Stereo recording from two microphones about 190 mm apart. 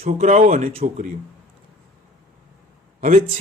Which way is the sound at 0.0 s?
40° right (ahead or behind).